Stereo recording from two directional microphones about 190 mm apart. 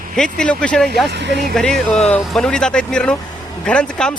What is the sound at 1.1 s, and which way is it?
Speech, 65° right (ahead or behind).